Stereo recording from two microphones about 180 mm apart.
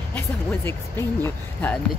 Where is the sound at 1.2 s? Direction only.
10° left (ahead or behind).